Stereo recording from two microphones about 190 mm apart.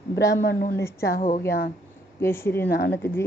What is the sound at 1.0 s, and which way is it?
Speech, 45° left (ahead or behind).